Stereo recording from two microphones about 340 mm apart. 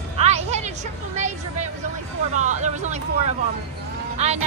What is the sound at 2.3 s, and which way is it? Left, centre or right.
Vehicle, right.